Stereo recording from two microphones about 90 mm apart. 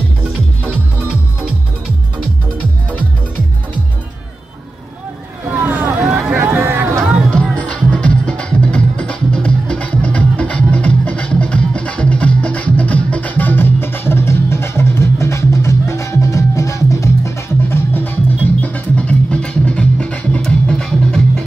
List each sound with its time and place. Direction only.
5.7 s vehicle: 15° right (ahead or behind)
6.3 s a sound: 25° right (ahead or behind)
7.5 s music: 15° left (ahead or behind)